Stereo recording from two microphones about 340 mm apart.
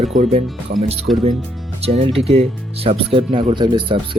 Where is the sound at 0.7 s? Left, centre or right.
Right.